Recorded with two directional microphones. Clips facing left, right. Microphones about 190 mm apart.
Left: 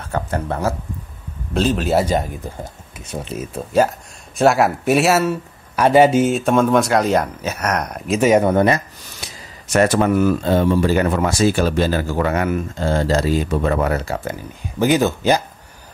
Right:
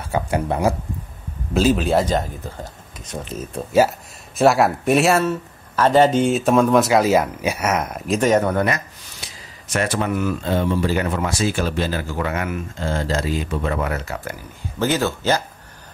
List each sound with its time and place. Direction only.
0.0 s speech: 10° right (ahead or behind); by 3.3 s 10° left (ahead or behind)
4.4 s speech: centre (ahead or behind); by 8.8 s 25° left (ahead or behind)
9.7 s speech: 45° left (ahead or behind); by 14.3 s 30° left (ahead or behind)
14.8 s speech: 15° left (ahead or behind)